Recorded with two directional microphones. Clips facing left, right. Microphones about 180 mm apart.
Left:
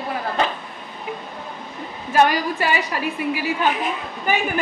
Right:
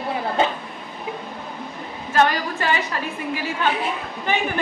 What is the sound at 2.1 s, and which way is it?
A woman's voice, 10° left (ahead or behind).